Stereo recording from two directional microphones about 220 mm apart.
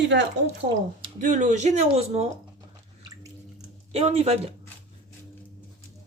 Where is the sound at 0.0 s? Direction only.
55° right (ahead or behind).